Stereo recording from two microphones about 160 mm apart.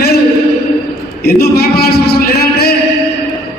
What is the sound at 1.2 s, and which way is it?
A man's voice, 75° left (ahead or behind).